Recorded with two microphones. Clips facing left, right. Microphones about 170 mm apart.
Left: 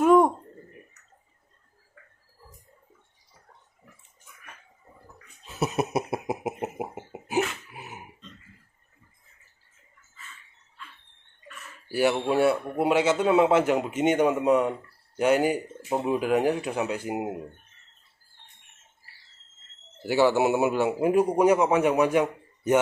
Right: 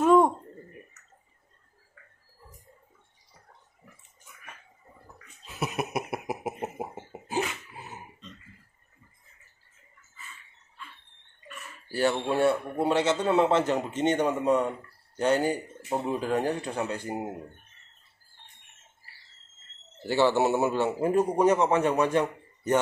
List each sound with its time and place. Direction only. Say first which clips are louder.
0.0 s a sound: left 2 dB; centre (ahead or behind)
5.8 s cough: left 4 dB; 25° left (ahead or behind)
7.7 s grunt: left 1 dB; 15° left (ahead or behind)
11.9 s a man's voice: left 3 dB; 10° left (ahead or behind)
20.0 s a man's voice: left 2 dB; 10° left (ahead or behind)